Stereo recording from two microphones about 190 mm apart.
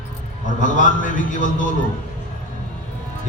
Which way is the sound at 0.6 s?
45° left (ahead or behind).